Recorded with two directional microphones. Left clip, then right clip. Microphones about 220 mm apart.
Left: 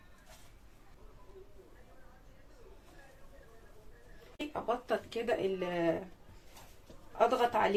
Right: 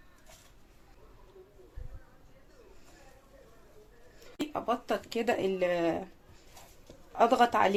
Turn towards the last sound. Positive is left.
turn(degrees=-45)  # may be behind; listen again after turning